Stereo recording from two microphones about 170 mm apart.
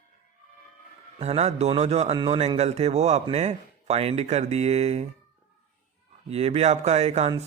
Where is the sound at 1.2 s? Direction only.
40° right (ahead or behind).